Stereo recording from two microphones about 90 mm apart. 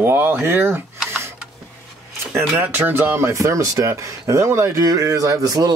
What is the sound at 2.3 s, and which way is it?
Speech, 20° right (ahead or behind).